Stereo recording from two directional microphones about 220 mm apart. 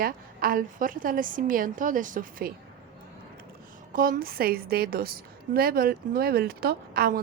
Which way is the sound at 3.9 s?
40° right (ahead or behind).